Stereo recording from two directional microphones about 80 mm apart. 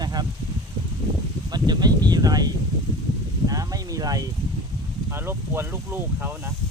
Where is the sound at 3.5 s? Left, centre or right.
Right.